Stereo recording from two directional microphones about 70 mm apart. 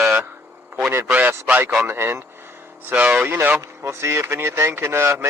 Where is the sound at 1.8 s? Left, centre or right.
Right.